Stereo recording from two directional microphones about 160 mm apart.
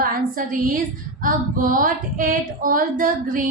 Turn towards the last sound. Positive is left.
turn(degrees=-60)  # may be behind; listen again after turning